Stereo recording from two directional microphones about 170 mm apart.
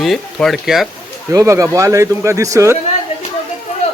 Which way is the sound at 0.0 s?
Centre (ahead or behind).